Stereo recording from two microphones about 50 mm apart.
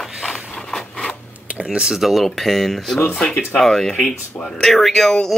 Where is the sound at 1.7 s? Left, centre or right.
Centre.